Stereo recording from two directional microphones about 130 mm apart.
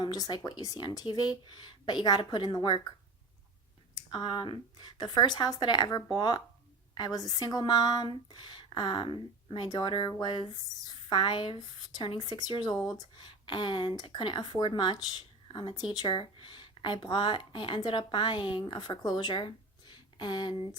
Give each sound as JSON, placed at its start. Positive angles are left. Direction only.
{"t": 0.0, "sound": "speech", "side_deg": 30}
{"t": 3.9, "sound": "speech", "side_deg": 35}